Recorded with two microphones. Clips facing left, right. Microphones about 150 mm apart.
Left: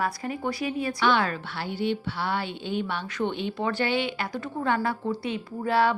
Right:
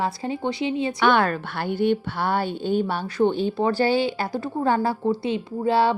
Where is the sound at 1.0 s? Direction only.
50° right (ahead or behind).